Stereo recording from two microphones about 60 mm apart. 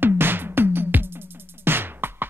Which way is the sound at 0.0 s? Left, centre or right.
Right.